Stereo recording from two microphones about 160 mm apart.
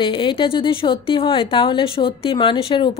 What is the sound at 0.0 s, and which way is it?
A woman's voice, 30° left (ahead or behind).